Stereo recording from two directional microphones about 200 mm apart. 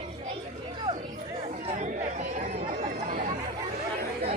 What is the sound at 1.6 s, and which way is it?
Chatter, 40° right (ahead or behind).